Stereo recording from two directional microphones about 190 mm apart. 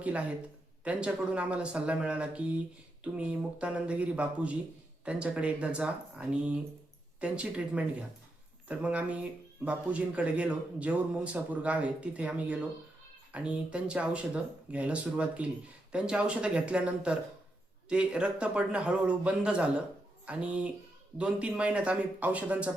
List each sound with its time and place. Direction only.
0.0 s a man's voice: 5° right (ahead or behind)